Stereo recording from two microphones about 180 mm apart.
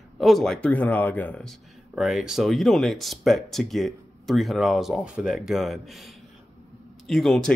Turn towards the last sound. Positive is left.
turn(degrees=5)  # may be behind; listen again after turning